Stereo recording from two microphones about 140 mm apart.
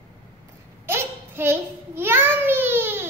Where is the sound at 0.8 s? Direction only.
15° right (ahead or behind).